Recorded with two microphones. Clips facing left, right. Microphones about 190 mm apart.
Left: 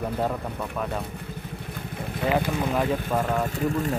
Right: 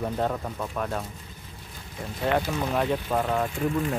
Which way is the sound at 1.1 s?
65° left (ahead or behind).